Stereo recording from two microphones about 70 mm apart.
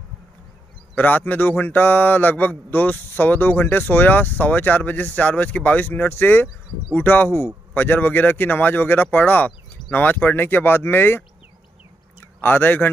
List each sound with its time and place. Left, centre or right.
0.9 s speech: left
12.4 s speech: left